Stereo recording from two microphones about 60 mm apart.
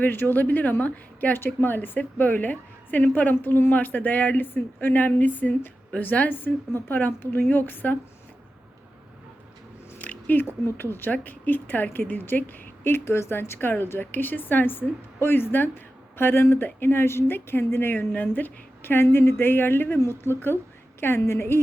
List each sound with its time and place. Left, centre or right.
0.0 s speech: left
10.0 s biting: left
10.4 s speech: left
18.1 s speech: left